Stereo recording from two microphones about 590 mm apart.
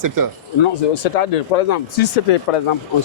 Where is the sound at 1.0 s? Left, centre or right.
Left.